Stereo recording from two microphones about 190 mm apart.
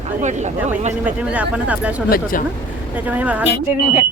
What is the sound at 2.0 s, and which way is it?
Speech, 50° left (ahead or behind).